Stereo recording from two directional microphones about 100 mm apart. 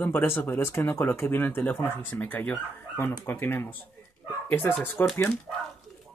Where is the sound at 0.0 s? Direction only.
20° left (ahead or behind).